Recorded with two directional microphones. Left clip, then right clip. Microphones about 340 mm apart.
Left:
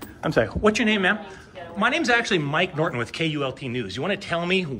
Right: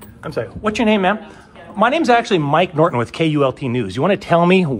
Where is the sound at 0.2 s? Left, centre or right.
Left.